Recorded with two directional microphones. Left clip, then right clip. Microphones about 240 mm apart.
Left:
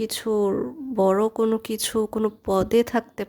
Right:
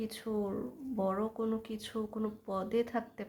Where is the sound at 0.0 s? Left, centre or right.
Left.